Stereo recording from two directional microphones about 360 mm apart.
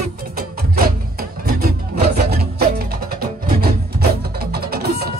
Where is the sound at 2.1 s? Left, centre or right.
Right.